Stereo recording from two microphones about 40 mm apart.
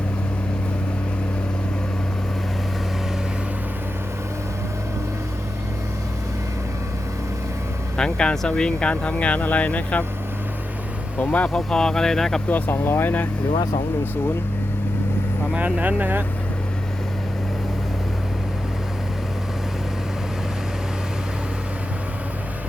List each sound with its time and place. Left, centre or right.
7.9 s speech: left
11.2 s speech: left
11.4 s speech: centre
12.5 s speech: left
12.7 s speech: left
15.5 s speech: right